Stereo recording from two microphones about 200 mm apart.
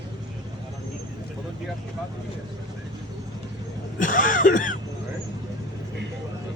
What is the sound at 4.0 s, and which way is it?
Throat clearing, 40° left (ahead or behind).